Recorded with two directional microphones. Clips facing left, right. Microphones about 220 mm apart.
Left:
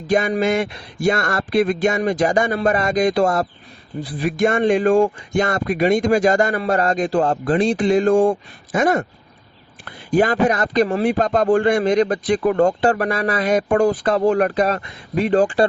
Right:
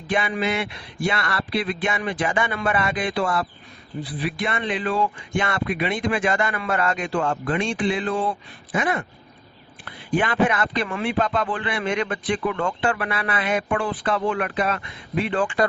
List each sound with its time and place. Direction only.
0.1 s a man's voice: 40° left (ahead or behind)